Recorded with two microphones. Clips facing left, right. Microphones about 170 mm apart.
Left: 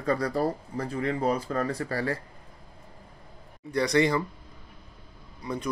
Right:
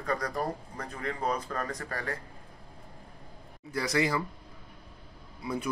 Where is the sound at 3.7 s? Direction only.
5° right (ahead or behind).